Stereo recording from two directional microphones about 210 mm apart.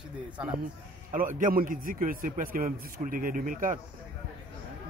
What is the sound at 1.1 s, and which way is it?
A man's voice, 40° right (ahead or behind).